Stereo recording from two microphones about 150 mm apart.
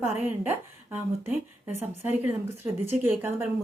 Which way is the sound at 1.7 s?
15° right (ahead or behind).